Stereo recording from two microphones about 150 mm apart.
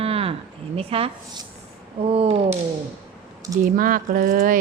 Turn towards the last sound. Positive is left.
turn(degrees=-65)  # may be behind; listen again after turning